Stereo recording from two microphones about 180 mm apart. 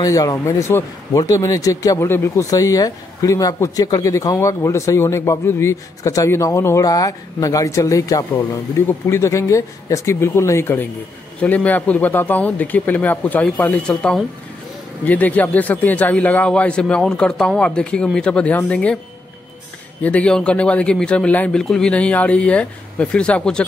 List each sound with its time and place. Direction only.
0.0 s a man's voice: 20° left (ahead or behind)
20.0 s a man's voice: 5° left (ahead or behind)